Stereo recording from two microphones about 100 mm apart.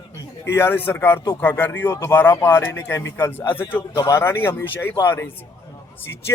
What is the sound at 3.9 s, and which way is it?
Speech, 30° left (ahead or behind).